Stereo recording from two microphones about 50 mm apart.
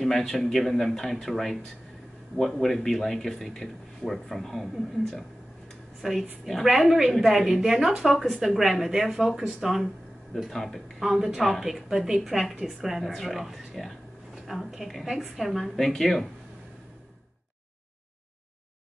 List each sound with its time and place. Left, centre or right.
0.0 s a woman's voice: centre
6.0 s a woman's voice: centre
11.0 s a woman's voice: centre